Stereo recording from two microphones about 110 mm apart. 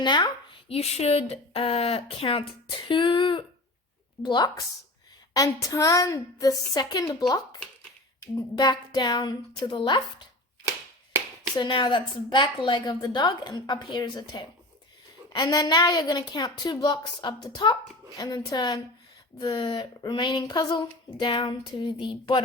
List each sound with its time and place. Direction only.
0.0 s speech: 45° left (ahead or behind)
0.7 s speech: 70° left (ahead or behind)
2.9 s speech: 50° left (ahead or behind)
5.3 s a woman's voice: 30° left (ahead or behind)
11.5 s a woman's voice: 40° left (ahead or behind)